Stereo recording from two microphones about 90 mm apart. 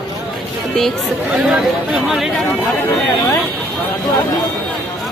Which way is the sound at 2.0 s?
Centre (ahead or behind).